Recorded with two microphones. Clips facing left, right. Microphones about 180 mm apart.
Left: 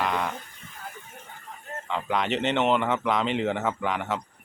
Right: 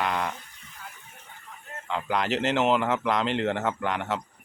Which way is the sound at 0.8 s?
45° left (ahead or behind).